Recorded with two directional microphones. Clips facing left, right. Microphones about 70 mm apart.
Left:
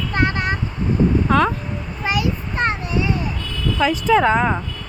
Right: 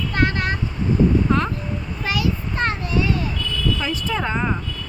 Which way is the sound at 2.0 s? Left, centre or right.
Left.